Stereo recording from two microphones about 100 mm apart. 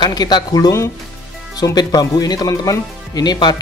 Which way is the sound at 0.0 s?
45° left (ahead or behind).